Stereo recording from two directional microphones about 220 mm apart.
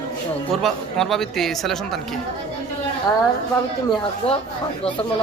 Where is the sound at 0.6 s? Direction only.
Centre (ahead or behind).